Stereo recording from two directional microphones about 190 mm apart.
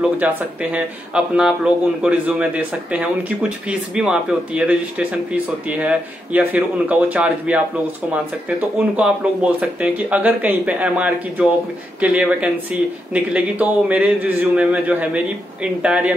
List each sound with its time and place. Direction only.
0.0 s speech: 5° right (ahead or behind)